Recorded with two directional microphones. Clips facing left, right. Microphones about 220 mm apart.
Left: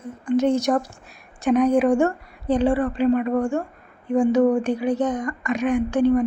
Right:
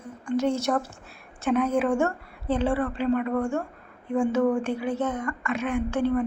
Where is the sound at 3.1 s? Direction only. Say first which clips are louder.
Left 2 dB; 25° left (ahead or behind).